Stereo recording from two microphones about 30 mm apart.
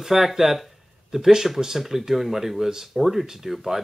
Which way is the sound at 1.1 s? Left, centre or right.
Right.